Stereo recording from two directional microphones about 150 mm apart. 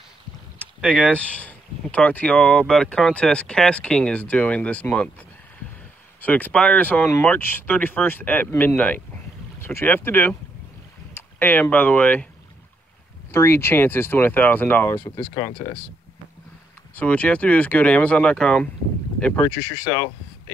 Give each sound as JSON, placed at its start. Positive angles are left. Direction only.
{"t": 0.7, "sound": "speech", "side_deg": 5}
{"t": 6.2, "sound": "speech", "side_deg": 10}
{"t": 13.3, "sound": "speech", "side_deg": 15}
{"t": 15.1, "sound": "speech", "side_deg": 25}
{"t": 16.9, "sound": "speech", "side_deg": 10}